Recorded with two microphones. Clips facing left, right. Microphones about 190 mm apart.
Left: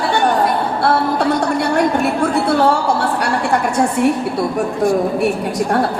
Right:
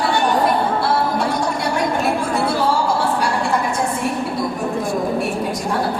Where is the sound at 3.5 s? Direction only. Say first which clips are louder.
Left 4 dB; 65° left (ahead or behind).